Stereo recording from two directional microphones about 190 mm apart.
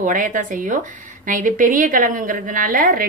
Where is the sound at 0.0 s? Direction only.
45° right (ahead or behind).